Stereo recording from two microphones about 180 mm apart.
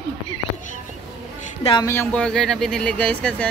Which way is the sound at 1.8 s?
15° left (ahead or behind).